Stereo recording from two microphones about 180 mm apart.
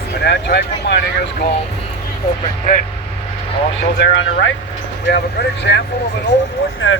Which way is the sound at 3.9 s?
90° left.